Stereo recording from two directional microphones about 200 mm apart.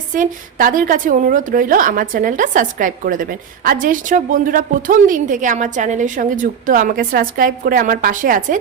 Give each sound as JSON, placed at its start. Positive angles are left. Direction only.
{"t": 0.1, "sound": "a woman's voice", "side_deg": -40}